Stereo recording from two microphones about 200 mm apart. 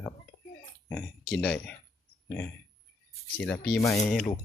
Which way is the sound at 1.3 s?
Centre (ahead or behind).